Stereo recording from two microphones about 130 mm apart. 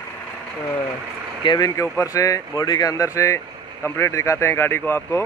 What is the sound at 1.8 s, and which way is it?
Speech, 25° left (ahead or behind).